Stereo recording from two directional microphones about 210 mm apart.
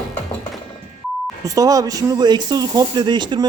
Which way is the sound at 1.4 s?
15° right (ahead or behind).